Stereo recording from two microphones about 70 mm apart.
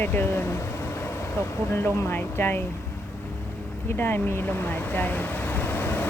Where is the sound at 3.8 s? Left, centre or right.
Left.